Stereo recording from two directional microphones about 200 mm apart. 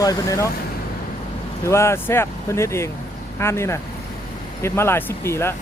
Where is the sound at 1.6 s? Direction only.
15° left (ahead or behind).